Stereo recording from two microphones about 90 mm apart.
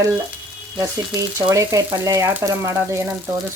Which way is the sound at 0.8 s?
35° right (ahead or behind).